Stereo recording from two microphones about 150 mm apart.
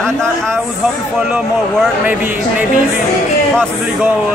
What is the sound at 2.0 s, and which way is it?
Speech, 10° right (ahead or behind).